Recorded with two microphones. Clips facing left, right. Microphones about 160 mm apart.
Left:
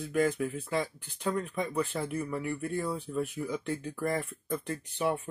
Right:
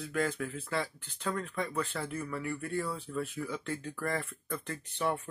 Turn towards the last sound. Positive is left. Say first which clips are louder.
# left 2 dB
turn(degrees=15)  # may be behind; listen again after turning